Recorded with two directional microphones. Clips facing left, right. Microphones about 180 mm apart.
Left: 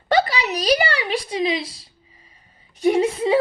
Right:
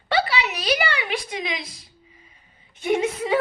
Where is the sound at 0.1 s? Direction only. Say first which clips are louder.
Left 4 dB; 40° left (ahead or behind).